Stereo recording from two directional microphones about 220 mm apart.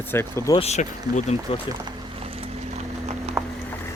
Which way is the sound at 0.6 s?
30° left (ahead or behind).